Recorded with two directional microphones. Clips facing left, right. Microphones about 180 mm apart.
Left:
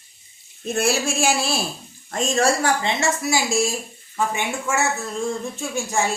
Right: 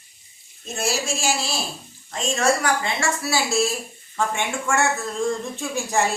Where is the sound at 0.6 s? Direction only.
60° left (ahead or behind).